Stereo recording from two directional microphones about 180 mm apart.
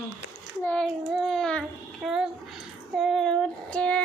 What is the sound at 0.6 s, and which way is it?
Speech, 10° left (ahead or behind).